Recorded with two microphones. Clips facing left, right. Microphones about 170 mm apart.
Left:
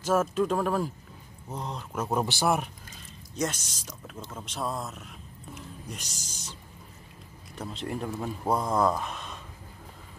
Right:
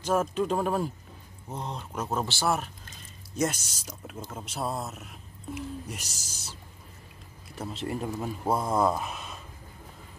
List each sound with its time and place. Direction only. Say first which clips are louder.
0.3 s speech: left 1 dB; centre (ahead or behind)
2.0 s speech: left 2 dB; 15° left (ahead or behind)
3.3 s speech: right 2 dB; 5° right (ahead or behind)
7.5 s speech: right 1 dB; 5° right (ahead or behind)